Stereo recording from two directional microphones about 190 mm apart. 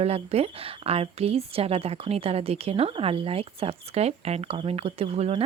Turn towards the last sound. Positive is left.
turn(degrees=-30)  # may be behind; listen again after turning